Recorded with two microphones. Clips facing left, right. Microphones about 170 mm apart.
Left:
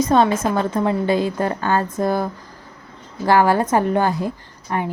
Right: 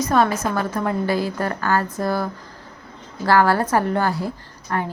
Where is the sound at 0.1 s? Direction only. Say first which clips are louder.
Even; 25° left (ahead or behind).